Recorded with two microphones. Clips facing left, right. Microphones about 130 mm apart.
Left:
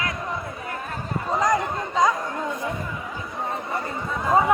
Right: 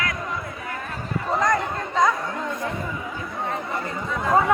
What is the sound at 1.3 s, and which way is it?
Chatter, 15° left (ahead or behind).